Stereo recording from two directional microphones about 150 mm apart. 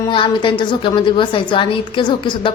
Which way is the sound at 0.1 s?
35° left (ahead or behind).